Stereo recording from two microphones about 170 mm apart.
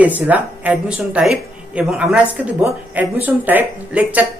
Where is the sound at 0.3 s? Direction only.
10° right (ahead or behind).